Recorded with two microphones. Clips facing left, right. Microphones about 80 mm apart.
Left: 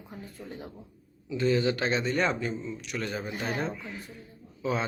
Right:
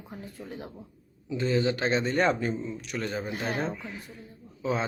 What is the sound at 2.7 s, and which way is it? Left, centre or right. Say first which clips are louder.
A woman's voice: right 1 dB; centre.